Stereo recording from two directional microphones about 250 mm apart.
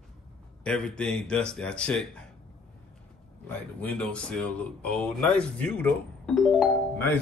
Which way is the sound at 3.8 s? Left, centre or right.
Centre.